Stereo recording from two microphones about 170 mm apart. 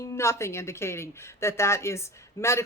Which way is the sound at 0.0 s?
15° left (ahead or behind).